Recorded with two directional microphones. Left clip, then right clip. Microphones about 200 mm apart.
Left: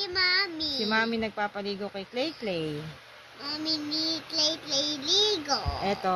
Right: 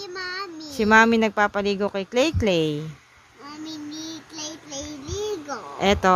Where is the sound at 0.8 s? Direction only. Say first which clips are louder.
Right 12 dB; 55° right (ahead or behind).